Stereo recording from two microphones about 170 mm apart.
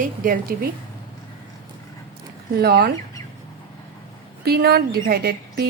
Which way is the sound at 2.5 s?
70° right (ahead or behind).